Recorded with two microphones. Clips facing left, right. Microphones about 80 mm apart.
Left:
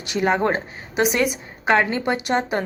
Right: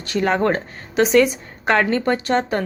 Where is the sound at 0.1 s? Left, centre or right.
Centre.